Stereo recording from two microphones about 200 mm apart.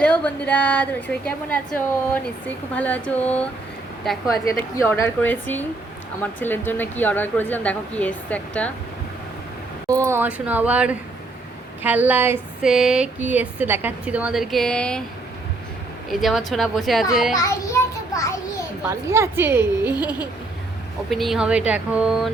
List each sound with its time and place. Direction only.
0.0 s a woman's voice: 5° left (ahead or behind)
4.4 s a woman's voice: 15° left (ahead or behind)
9.9 s a sound: 15° right (ahead or behind); by 15.0 s 5° left (ahead or behind)
16.0 s a woman's voice: centre (ahead or behind)
17.3 s a child's voice: 15° left (ahead or behind)
18.8 s a sound: 15° right (ahead or behind)
21.1 s a woman's voice: centre (ahead or behind)